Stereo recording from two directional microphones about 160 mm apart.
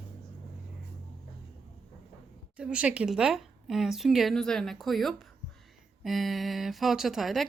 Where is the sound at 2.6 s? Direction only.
5° right (ahead or behind).